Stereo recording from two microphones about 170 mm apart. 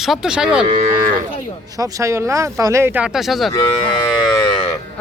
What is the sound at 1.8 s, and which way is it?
Speech, 20° right (ahead or behind).